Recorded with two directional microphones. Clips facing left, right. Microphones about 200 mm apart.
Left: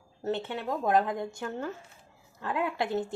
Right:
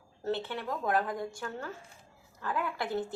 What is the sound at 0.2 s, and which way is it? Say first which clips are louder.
A woman's voice: left 2 dB; 20° left (ahead or behind).